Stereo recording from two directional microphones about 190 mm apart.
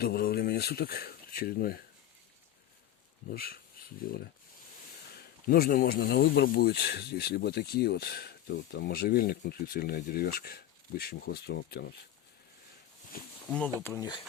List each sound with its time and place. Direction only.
0.0 s speech: 55° left (ahead or behind)
3.3 s speech: 50° left (ahead or behind)
13.1 s speech: 50° left (ahead or behind)
13.8 s speech: 15° left (ahead or behind)